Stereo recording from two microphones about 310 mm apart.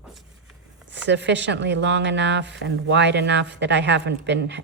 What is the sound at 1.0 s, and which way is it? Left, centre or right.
Speech, right.